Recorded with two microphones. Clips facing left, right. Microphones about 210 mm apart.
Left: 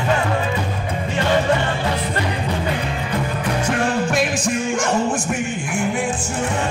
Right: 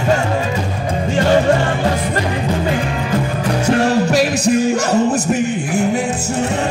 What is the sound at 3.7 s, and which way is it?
Music, 40° right (ahead or behind).